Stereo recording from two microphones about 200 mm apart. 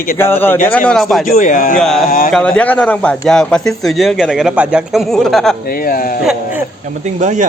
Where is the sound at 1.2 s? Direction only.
40° left (ahead or behind).